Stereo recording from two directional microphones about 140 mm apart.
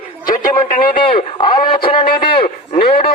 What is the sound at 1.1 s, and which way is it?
Radio, 40° left (ahead or behind).